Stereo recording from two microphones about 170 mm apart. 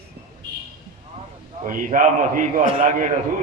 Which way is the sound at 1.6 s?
50° right (ahead or behind).